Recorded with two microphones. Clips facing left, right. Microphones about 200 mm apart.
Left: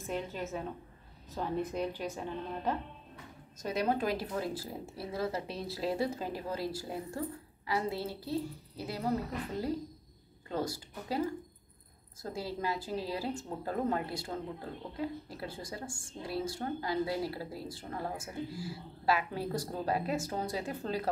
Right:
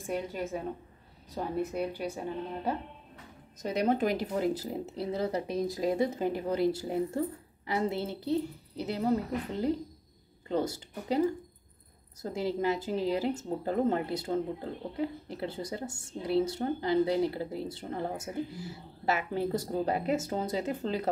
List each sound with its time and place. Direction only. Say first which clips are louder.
0.0 s a woman's voice: right 3 dB; 10° right (ahead or behind)
10.5 s speech: right 5 dB; 20° right (ahead or behind)
12.2 s speech: right 6 dB; 20° right (ahead or behind)